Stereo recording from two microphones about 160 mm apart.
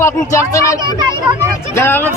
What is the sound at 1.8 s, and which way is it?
Speech, 15° left (ahead or behind).